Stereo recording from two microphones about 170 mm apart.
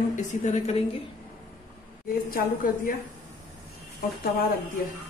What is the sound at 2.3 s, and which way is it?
Speech, 60° left (ahead or behind).